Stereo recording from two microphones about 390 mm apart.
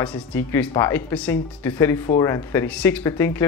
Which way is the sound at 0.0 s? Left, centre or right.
Centre.